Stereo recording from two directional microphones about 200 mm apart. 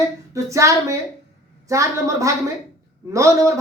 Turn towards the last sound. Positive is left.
turn(degrees=-15)  # may be behind; listen again after turning